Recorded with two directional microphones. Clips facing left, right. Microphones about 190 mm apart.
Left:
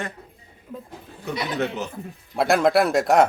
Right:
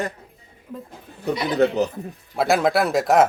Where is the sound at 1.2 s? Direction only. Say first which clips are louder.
Right 6 dB; 35° right (ahead or behind).